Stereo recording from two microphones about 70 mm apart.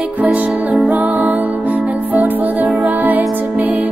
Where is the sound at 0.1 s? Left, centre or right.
Right.